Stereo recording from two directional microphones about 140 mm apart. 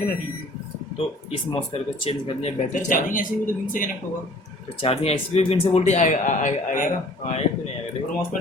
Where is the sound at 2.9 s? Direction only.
75° left (ahead or behind).